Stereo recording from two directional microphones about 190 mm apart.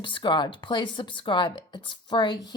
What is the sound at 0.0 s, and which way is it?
A woman's voice, 25° left (ahead or behind).